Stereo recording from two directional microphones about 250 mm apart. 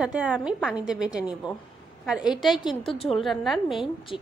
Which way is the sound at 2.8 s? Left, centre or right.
Left.